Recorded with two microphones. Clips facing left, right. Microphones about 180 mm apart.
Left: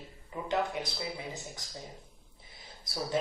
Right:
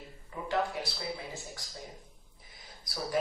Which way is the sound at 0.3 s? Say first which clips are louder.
Left 2 dB; 20° left (ahead or behind).